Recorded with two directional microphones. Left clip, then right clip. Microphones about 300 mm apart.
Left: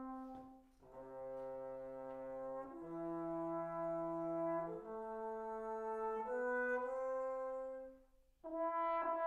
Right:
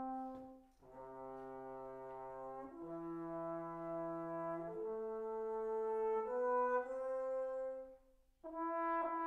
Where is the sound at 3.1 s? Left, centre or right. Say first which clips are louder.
Left 3 dB; centre.